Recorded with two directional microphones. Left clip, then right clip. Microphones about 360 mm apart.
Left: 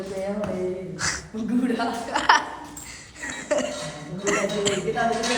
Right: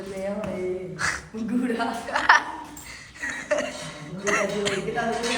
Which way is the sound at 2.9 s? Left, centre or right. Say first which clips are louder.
Right 3 dB; centre.